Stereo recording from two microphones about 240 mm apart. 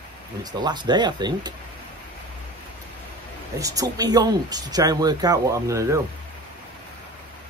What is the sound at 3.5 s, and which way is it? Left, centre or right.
Speech, centre.